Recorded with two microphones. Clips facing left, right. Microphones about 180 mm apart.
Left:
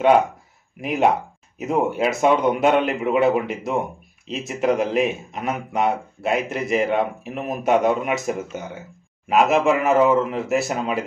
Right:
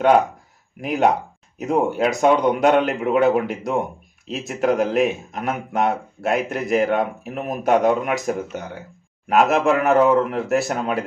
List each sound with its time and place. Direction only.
0.7 s speech: centre (ahead or behind)